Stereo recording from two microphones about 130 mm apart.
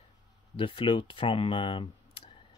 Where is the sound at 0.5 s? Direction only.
40° left (ahead or behind).